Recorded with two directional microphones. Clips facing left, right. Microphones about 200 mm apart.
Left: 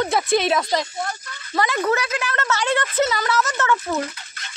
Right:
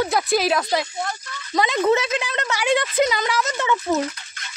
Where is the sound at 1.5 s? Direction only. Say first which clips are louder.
Right 3 dB; 20° right (ahead or behind).